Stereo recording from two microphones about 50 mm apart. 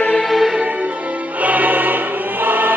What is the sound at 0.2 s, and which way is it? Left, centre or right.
Music, centre.